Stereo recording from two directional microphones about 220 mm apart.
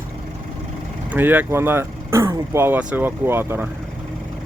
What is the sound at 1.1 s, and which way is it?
Speech, 10° right (ahead or behind).